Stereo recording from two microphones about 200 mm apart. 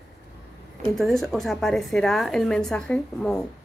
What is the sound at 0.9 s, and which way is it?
A woman's voice, centre (ahead or behind).